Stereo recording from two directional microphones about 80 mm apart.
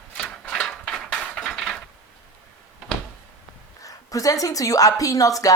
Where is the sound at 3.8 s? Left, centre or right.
Left.